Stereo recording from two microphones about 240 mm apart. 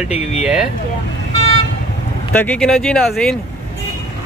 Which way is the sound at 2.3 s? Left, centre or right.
Centre.